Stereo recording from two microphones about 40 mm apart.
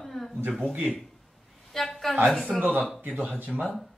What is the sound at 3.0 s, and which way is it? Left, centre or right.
Speech, right.